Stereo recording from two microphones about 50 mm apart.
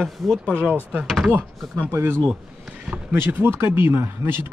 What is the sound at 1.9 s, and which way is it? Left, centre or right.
Speech, right.